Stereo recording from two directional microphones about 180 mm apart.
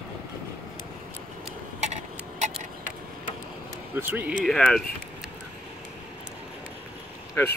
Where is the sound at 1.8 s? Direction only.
40° right (ahead or behind).